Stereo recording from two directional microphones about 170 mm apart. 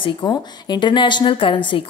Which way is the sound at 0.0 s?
25° left (ahead or behind).